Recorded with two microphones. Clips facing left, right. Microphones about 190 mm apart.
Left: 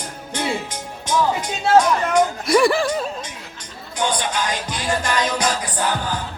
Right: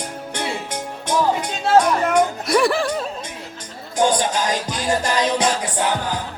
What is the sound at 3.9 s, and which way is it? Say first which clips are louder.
Music: right 4 dB; 45° right (ahead or behind).